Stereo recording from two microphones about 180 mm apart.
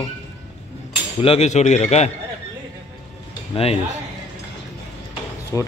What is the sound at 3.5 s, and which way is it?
Speech, 35° left (ahead or behind).